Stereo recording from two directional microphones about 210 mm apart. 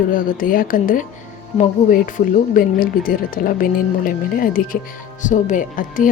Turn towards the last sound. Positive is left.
turn(degrees=40)  # may be behind; listen again after turning